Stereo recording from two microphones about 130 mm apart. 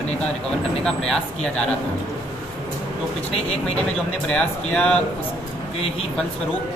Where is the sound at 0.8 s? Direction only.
5° left (ahead or behind).